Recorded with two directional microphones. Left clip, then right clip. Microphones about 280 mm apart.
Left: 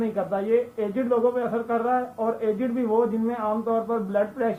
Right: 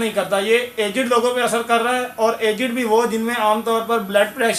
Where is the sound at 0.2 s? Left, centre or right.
Right.